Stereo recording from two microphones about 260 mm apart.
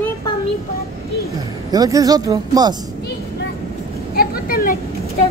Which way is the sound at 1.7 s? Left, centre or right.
Centre.